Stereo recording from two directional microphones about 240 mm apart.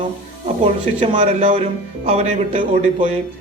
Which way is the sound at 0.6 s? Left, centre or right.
Right.